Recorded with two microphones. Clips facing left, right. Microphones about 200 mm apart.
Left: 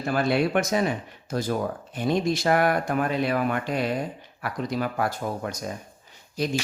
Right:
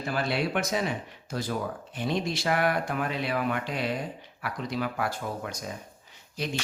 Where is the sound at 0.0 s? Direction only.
50° left (ahead or behind).